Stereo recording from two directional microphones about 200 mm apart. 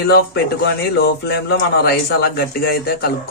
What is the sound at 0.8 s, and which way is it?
Speech, 55° left (ahead or behind).